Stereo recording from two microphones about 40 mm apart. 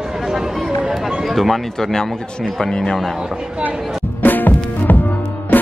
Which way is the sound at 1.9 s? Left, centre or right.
Centre.